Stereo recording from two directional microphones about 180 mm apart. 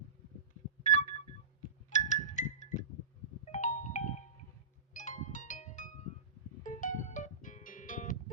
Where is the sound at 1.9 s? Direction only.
40° left (ahead or behind).